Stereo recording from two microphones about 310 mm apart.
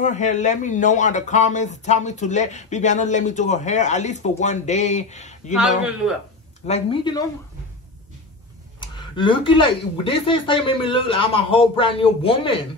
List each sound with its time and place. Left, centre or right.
0.0 s speech: left
5.5 s a man's voice: centre
6.7 s speech: centre
8.8 s speech: centre